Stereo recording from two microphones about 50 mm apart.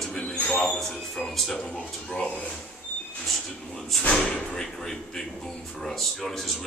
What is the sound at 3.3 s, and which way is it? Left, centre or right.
Speech, centre.